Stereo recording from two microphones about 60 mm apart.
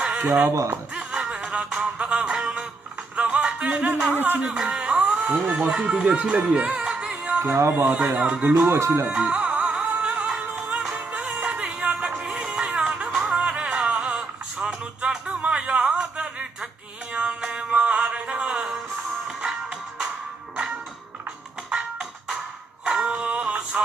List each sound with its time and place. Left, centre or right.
0.0 s a sound: centre
0.5 s speech: right
0.9 s music: centre
4.1 s speech: right
4.4 s music: centre
5.7 s speech: centre
7.4 s speech: right
8.4 s music: right
8.6 s speech: right
9.2 s music: centre
22.8 s music: centre